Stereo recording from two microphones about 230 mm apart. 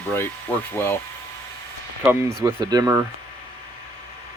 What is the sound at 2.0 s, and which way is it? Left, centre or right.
Speech, centre.